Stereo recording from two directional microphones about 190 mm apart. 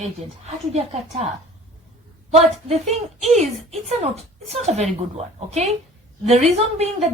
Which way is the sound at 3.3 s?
35° right (ahead or behind).